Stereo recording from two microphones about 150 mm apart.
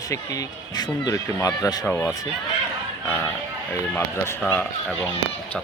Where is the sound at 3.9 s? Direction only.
15° left (ahead or behind).